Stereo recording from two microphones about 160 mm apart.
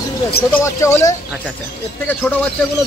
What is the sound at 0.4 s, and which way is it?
Speech, 15° left (ahead or behind).